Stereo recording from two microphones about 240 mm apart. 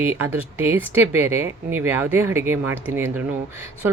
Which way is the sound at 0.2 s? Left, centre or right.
Centre.